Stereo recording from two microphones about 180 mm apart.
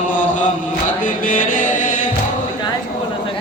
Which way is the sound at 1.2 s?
50° left (ahead or behind).